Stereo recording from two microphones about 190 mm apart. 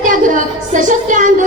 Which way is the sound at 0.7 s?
40° right (ahead or behind).